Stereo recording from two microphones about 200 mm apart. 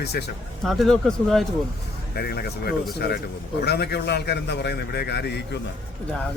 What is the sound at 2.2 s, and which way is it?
A man's voice, 50° left (ahead or behind).